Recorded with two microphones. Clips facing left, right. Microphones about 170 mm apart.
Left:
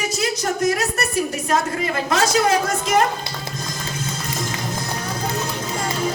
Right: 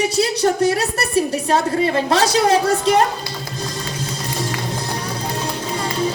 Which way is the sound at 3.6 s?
35° right (ahead or behind).